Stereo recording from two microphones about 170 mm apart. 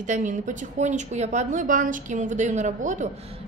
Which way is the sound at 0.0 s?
45° right (ahead or behind).